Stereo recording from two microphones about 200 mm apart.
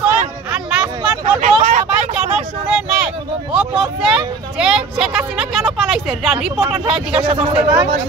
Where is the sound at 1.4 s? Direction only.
40° right (ahead or behind).